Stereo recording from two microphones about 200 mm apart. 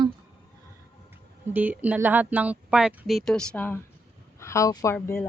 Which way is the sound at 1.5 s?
10° right (ahead or behind).